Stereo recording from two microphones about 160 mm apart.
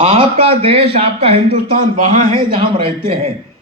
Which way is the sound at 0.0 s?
35° right (ahead or behind).